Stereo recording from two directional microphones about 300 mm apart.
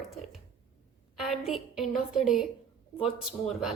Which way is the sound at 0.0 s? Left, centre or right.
Centre.